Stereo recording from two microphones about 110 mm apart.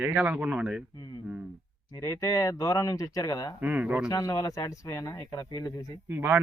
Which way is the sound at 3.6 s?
15° right (ahead or behind).